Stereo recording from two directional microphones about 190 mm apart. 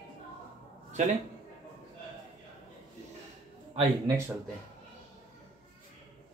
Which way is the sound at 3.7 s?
20° right (ahead or behind).